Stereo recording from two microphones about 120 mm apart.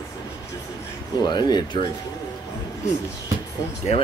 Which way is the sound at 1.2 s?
35° left (ahead or behind).